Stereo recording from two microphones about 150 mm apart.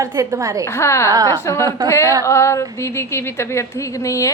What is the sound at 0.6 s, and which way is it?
Speech, 15° left (ahead or behind).